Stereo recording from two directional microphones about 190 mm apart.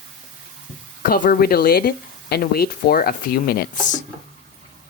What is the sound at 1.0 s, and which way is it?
Speech, 50° left (ahead or behind).